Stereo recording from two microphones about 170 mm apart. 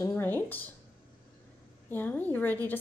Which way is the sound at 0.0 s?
15° left (ahead or behind).